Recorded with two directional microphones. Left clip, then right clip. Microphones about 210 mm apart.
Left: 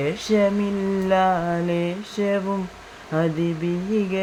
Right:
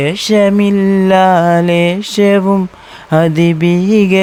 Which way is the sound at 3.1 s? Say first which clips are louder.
Right 12 dB; 55° right (ahead or behind).